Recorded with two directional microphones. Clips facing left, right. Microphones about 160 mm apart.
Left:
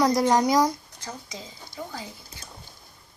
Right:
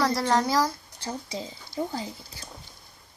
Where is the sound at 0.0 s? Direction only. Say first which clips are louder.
Left 3 dB; 20° left (ahead or behind).